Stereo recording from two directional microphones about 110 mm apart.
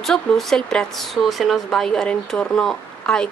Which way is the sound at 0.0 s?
5° left (ahead or behind).